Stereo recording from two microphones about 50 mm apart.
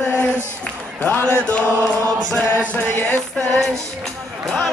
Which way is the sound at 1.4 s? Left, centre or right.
Left.